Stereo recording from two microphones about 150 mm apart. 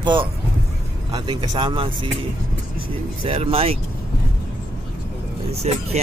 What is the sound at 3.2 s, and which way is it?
Speech, 40° right (ahead or behind).